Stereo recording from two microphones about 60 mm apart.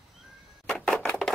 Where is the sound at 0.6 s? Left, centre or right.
Centre.